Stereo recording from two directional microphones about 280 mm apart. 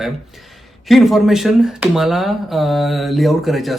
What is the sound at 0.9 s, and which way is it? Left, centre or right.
Speech, centre.